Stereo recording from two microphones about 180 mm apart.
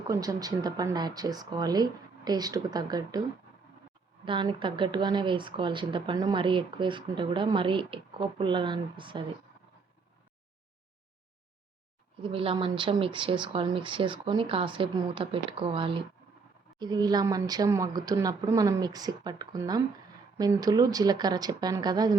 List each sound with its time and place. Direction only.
0.1 s speech: 20° right (ahead or behind)
4.3 s speech: 25° right (ahead or behind)
12.2 s speech: 30° right (ahead or behind)